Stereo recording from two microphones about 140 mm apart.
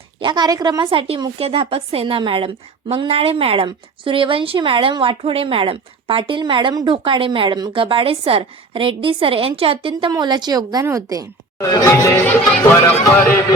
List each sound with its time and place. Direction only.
0.2 s a woman's voice: 30° right (ahead or behind)
10.1 s a woman's voice: 30° right (ahead or behind)
11.5 s music: 25° left (ahead or behind)